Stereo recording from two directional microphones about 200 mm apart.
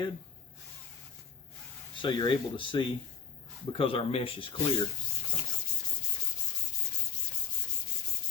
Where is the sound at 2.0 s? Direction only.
25° left (ahead or behind).